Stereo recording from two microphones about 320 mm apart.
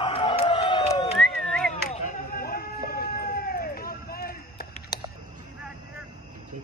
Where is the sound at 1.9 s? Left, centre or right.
Left.